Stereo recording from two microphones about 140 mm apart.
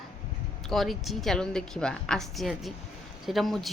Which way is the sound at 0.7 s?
Centre (ahead or behind).